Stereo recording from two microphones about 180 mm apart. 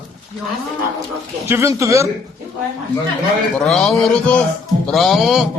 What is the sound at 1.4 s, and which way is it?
Speech, 15° right (ahead or behind).